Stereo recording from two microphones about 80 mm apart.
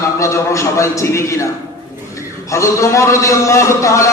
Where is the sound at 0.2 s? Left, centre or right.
Left.